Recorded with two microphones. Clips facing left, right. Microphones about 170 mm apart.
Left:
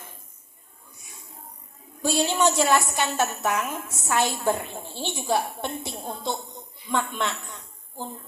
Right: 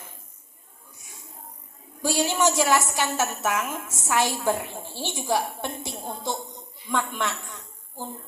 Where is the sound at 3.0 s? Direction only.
15° left (ahead or behind).